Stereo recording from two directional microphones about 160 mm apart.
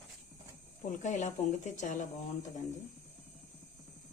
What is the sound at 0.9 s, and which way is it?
Speech, 50° left (ahead or behind).